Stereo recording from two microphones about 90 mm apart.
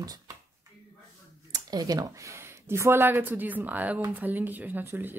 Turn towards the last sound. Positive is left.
turn(degrees=-20)  # may be behind; listen again after turning